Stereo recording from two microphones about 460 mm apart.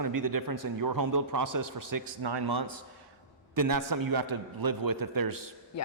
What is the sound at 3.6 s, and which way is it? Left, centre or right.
A man's voice, right.